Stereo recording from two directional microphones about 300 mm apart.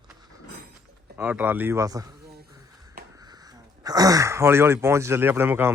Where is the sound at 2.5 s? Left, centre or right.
Centre.